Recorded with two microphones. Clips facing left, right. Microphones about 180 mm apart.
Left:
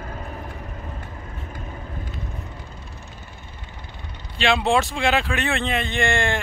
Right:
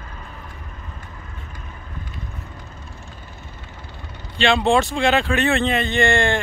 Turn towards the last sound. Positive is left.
turn(degrees=0)  # may be behind; listen again after turning